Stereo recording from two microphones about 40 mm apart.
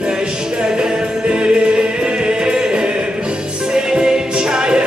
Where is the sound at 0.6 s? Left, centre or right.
Right.